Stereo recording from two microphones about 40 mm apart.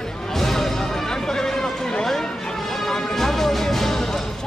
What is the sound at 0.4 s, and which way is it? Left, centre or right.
Music, centre.